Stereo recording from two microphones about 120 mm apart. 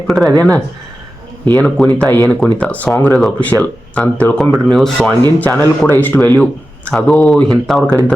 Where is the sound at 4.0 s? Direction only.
10° left (ahead or behind).